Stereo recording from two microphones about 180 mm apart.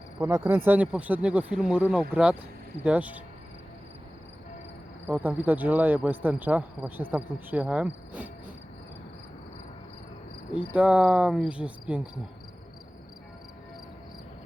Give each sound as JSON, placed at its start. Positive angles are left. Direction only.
{"t": 0.2, "sound": "cricket", "side_deg": -15}
{"t": 5.0, "sound": "cricket", "side_deg": -10}
{"t": 10.5, "sound": "cricket", "side_deg": 30}
{"t": 10.8, "sound": "cricket", "side_deg": -5}